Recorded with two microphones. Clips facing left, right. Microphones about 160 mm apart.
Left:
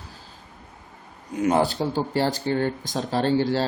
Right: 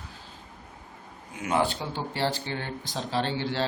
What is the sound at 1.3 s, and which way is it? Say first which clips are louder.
Speech: left 6 dB; 40° left (ahead or behind).